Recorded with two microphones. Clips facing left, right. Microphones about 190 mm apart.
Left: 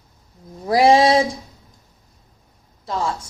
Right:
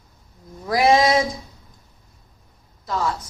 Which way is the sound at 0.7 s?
30° left (ahead or behind).